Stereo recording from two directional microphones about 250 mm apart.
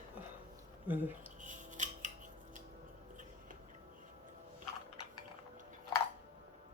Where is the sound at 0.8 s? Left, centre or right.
Centre.